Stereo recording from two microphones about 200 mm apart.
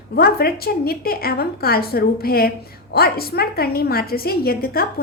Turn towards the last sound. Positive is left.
turn(degrees=50)  # may be behind; listen again after turning